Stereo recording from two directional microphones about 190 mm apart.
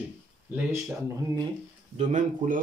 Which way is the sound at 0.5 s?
10° right (ahead or behind).